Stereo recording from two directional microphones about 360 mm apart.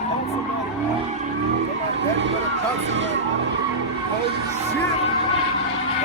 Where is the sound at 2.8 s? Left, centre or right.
Right.